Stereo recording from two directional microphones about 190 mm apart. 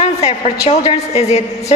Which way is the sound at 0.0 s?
35° left (ahead or behind).